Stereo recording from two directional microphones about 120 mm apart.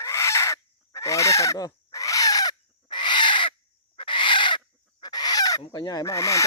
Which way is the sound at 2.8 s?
40° left (ahead or behind).